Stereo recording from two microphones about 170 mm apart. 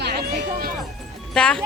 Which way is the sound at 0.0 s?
70° right (ahead or behind).